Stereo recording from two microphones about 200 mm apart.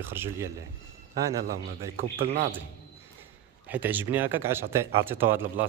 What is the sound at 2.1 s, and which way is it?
Speech, 30° right (ahead or behind).